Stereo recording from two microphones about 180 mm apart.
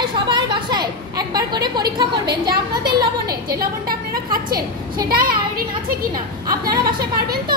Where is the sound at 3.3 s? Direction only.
55° right (ahead or behind).